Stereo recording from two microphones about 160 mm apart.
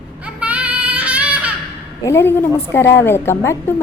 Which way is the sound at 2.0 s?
15° left (ahead or behind).